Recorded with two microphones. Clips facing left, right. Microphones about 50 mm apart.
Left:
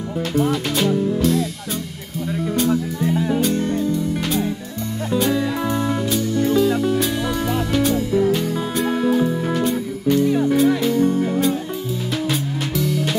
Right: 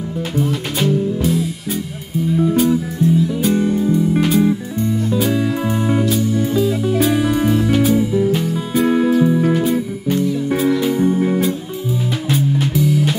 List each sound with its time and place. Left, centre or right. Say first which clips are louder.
0.5 s music: right 1 dB; centre
2.5 s music: right 1 dB; centre
3.0 s music: right 4 dB; left
3.3 s music: right 3 dB; centre
10.2 s music: left 2 dB; left
10.8 s music: right 2 dB; centre